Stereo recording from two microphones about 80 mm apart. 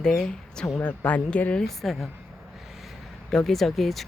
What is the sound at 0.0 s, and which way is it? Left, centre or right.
Speech, centre.